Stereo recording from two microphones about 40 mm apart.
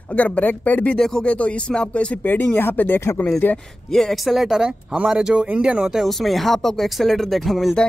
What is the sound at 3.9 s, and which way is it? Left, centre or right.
Speech, centre.